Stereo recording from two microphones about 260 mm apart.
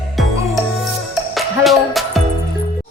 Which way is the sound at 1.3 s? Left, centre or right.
Centre.